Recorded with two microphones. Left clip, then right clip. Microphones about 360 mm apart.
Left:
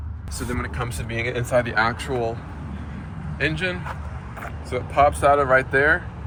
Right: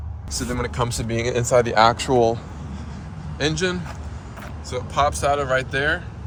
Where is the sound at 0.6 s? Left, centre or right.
Centre.